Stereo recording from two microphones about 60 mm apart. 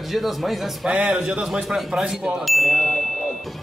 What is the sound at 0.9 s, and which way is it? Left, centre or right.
Speech, centre.